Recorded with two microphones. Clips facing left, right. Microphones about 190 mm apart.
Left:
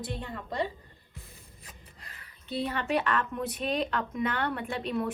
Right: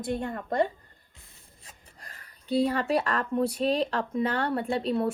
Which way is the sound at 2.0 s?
45° right (ahead or behind).